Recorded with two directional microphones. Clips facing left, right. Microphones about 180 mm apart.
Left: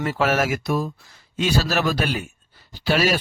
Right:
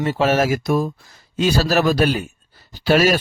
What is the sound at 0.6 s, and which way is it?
A man's voice, 45° right (ahead or behind).